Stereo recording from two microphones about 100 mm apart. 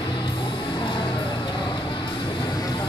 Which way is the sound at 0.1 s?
55° left (ahead or behind).